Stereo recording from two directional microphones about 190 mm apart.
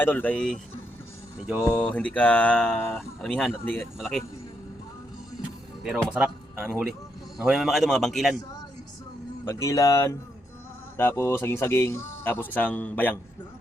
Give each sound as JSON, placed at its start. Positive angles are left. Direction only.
{"t": 0.0, "sound": "speech", "side_deg": 10}
{"t": 1.7, "sound": "speech", "side_deg": 5}
{"t": 5.8, "sound": "a man's voice", "side_deg": -5}
{"t": 9.4, "sound": "speech", "side_deg": 15}